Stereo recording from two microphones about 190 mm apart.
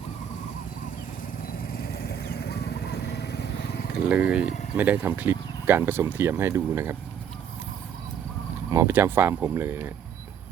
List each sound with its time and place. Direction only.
1.8 s vehicle: 55° left (ahead or behind)
3.9 s speech: 5° right (ahead or behind)
8.7 s speech: 15° right (ahead or behind)